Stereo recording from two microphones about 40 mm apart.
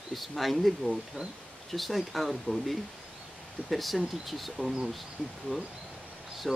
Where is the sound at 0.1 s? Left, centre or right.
Centre.